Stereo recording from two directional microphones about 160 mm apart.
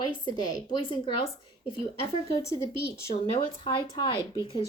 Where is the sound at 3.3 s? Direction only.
35° left (ahead or behind).